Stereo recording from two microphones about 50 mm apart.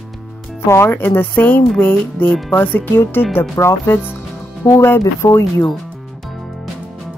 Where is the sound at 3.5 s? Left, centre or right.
Left.